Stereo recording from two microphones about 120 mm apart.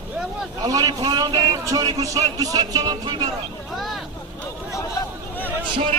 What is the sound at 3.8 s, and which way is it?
Vehicle, centre (ahead or behind).